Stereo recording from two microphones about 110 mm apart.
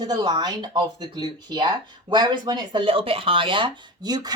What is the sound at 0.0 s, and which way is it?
Speech, 40° right (ahead or behind).